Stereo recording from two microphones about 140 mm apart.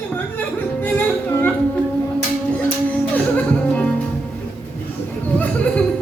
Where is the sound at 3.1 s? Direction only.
10° left (ahead or behind).